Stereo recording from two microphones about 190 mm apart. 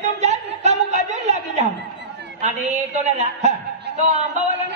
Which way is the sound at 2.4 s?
40° right (ahead or behind).